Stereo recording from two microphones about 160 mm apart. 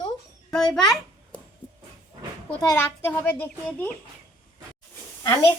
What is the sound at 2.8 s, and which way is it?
Speech, 10° left (ahead or behind).